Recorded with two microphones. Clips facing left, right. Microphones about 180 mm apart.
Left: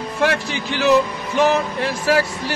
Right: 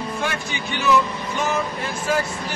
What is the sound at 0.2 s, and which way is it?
Speech, 75° left (ahead or behind).